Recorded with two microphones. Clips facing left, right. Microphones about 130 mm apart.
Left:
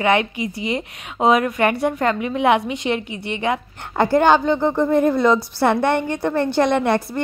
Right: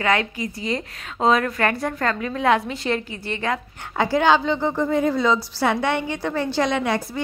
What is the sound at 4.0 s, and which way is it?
A woman's voice, 55° left (ahead or behind).